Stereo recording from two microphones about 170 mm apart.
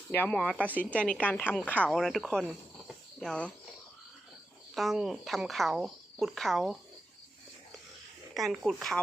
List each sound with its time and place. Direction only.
0.1 s a woman's voice: 10° left (ahead or behind)
0.3 s a woman's voice: centre (ahead or behind)
4.7 s speech: centre (ahead or behind)
8.4 s speech: centre (ahead or behind)